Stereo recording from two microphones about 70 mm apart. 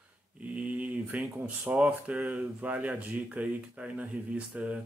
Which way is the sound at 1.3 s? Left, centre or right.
Centre.